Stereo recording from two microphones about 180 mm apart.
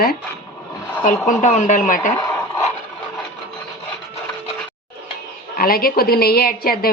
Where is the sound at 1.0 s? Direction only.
45° left (ahead or behind).